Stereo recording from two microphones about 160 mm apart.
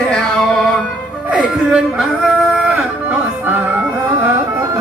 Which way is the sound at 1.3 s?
5° right (ahead or behind).